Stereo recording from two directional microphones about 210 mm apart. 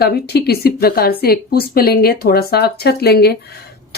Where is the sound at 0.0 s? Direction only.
50° left (ahead or behind).